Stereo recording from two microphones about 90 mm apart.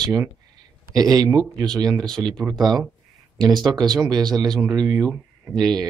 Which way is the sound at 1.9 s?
5° left (ahead or behind).